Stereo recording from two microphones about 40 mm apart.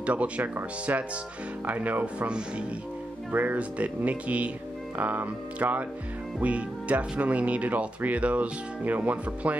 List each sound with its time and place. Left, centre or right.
0.0 s speech: right
1.7 s speech: right
2.2 s speech: right
3.3 s speech: right